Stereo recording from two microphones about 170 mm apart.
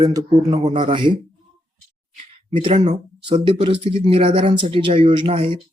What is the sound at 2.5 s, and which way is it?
Speech, 30° right (ahead or behind).